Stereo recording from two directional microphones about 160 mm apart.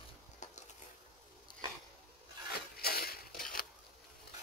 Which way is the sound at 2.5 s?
75° left (ahead or behind).